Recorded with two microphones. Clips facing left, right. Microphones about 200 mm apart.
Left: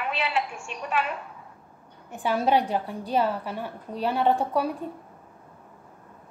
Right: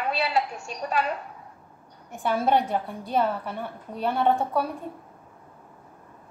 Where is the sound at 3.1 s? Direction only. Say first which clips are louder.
Even; 5° left (ahead or behind).